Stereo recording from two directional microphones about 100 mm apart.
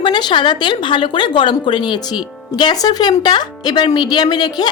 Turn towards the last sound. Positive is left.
turn(degrees=45)  # may be behind; listen again after turning